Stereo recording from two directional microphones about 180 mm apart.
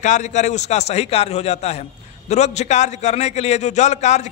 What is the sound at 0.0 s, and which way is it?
A man's voice, 40° left (ahead or behind).